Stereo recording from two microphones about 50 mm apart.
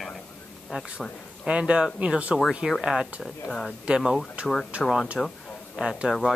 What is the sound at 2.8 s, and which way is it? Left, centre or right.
Speech, centre.